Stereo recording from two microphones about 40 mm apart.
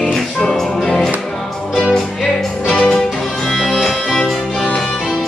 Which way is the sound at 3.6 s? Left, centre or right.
Centre.